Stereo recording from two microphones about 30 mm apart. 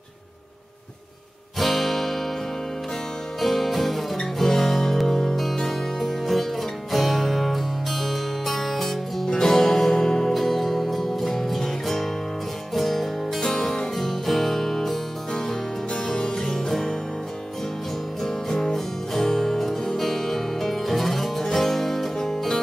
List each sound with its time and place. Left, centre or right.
1.6 s guitar: centre
3.3 s music: centre
5.3 s music: centre
16.1 s music: left
18.2 s music: centre